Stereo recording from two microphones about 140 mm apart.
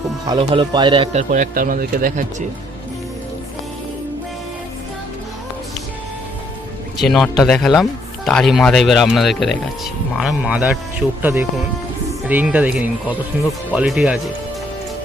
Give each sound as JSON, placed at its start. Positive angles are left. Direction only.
{"t": 0.3, "sound": "speech", "side_deg": -40}
{"t": 1.1, "sound": "speech", "side_deg": -65}
{"t": 7.0, "sound": "speech", "side_deg": 0}